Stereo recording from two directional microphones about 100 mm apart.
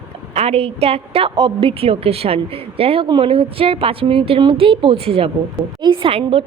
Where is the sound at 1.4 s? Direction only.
60° right (ahead or behind); by 5.3 s 75° right (ahead or behind).